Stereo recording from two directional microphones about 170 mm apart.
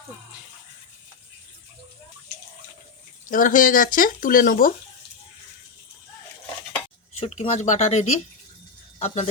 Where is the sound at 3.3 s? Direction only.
50° left (ahead or behind).